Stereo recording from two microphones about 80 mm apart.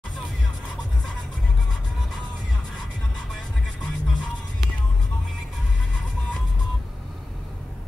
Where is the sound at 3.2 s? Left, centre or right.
Centre.